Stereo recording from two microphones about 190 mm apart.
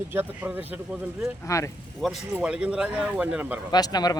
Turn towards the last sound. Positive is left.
turn(degrees=20)  # may be behind; listen again after turning